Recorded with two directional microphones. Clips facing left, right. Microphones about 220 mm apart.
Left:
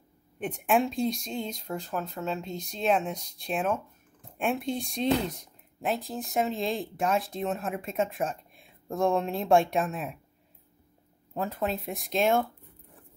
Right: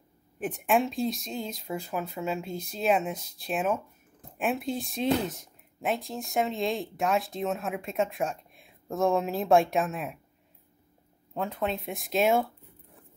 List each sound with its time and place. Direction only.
0.4 s speech: centre (ahead or behind)
11.3 s speech: centre (ahead or behind)